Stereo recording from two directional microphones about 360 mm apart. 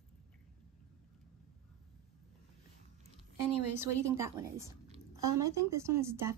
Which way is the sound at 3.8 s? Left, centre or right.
Centre.